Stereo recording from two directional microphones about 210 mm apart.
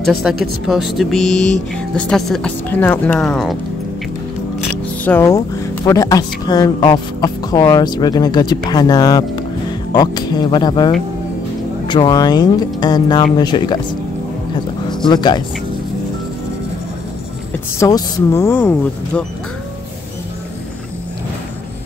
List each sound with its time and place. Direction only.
0.0 s speech: centre (ahead or behind)
5.0 s speech: 10° left (ahead or behind)
11.9 s speech: 20° left (ahead or behind)
15.0 s speech: 20° left (ahead or behind)
17.7 s speech: 15° left (ahead or behind)